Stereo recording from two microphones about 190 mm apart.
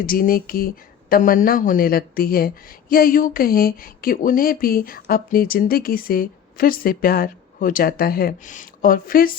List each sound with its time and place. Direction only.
0.0 s a woman's voice: 50° left (ahead or behind)